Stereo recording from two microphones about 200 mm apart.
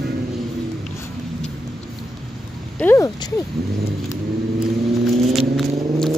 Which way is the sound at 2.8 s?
10° left (ahead or behind).